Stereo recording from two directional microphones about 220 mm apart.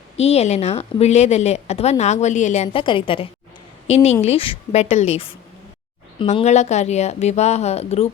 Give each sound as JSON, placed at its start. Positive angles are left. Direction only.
{"t": 0.2, "sound": "a woman's voice", "side_deg": 30}